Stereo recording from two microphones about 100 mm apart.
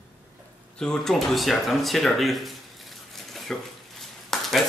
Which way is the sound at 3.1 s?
Centre (ahead or behind).